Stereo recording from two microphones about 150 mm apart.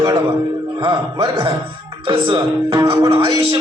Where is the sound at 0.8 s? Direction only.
35° right (ahead or behind).